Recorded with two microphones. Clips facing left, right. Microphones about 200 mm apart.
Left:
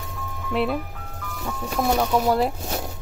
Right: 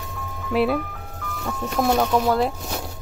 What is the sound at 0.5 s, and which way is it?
Speech, 5° right (ahead or behind).